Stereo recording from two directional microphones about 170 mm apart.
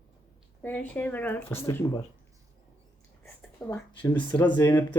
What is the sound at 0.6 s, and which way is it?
Speech, 10° left (ahead or behind).